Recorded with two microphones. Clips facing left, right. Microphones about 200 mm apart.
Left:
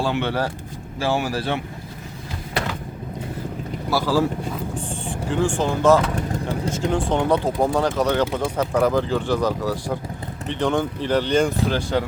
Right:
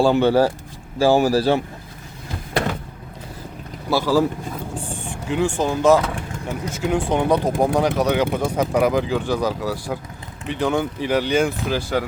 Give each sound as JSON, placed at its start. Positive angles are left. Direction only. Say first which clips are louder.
{"t": 0.1, "sound": "speech", "louder": "right 7 dB", "side_deg": -40}
{"t": 4.0, "sound": "speech", "louder": "right 2 dB", "side_deg": -15}
{"t": 5.3, "sound": "speech", "louder": "right 1 dB", "side_deg": -15}
{"t": 6.1, "sound": "vehicle", "louder": "left 4 dB", "side_deg": 35}
{"t": 6.7, "sound": "speech", "louder": "right 2 dB", "side_deg": -10}